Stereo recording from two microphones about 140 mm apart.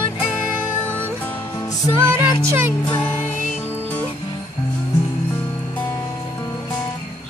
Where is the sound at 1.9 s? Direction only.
20° right (ahead or behind).